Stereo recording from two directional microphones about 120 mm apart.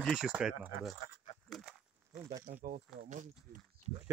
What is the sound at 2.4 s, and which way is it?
Speech, 90° right.